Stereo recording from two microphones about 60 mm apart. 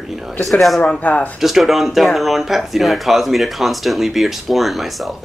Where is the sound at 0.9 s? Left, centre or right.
Left.